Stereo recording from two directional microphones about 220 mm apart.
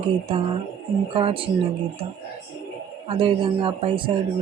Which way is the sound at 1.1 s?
25° right (ahead or behind).